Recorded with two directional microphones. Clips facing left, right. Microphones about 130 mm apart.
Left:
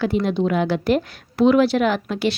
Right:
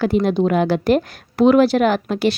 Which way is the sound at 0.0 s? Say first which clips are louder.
Right 3 dB; 45° right (ahead or behind).